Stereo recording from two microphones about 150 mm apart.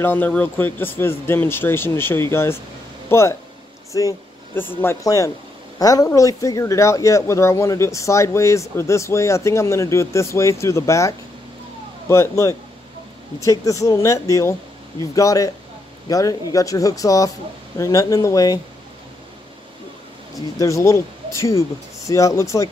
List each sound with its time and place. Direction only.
0.0 s speech: 10° left (ahead or behind)
20.3 s speech: 20° left (ahead or behind)